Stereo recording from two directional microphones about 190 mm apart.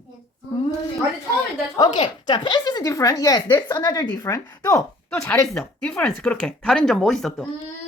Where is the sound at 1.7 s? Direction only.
20° left (ahead or behind); by 7.4 s centre (ahead or behind).